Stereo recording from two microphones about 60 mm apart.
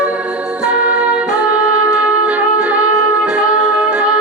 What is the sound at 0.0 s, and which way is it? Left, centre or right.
Music, right.